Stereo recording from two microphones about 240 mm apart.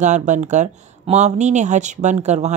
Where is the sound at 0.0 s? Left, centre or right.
Right.